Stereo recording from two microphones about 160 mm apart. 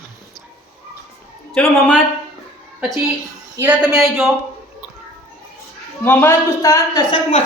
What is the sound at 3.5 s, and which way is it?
Speech, 10° right (ahead or behind).